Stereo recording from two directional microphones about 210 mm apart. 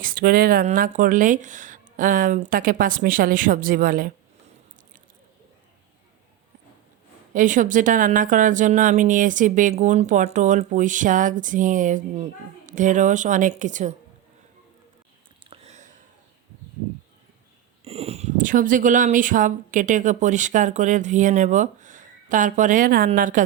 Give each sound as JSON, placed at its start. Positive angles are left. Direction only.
{"t": 0.0, "sound": "a woman's voice", "side_deg": -45}
{"t": 7.3, "sound": "a woman's voice", "side_deg": -40}
{"t": 15.4, "sound": "a sound", "side_deg": -30}
{"t": 17.8, "sound": "a woman's voice", "side_deg": -30}